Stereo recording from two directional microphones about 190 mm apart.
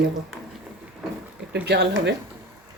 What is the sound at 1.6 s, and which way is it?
Speech, 60° right (ahead or behind).